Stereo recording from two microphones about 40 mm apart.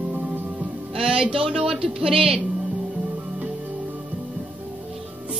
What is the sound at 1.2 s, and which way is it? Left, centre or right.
Speech, right.